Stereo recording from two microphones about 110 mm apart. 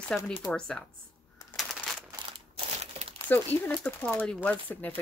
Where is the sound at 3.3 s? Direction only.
15° left (ahead or behind).